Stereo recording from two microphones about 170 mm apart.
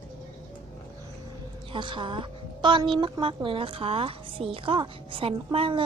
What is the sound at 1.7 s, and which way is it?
A woman's voice, 30° right (ahead or behind).